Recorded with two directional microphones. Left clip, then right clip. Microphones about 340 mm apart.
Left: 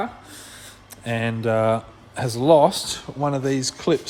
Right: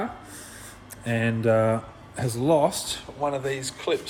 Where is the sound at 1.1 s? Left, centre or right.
Centre; by 4.0 s left.